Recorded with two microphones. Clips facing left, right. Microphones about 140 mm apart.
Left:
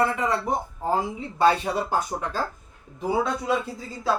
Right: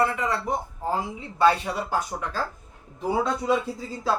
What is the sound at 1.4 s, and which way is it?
Speech, 20° left (ahead or behind).